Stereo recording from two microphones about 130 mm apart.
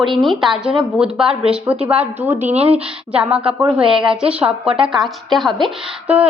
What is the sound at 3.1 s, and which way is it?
A woman's voice, 10° right (ahead or behind).